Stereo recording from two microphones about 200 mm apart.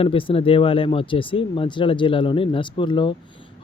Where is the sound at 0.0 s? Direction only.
25° left (ahead or behind).